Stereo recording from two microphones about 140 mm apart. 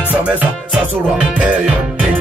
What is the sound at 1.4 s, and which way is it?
Music, 10° right (ahead or behind).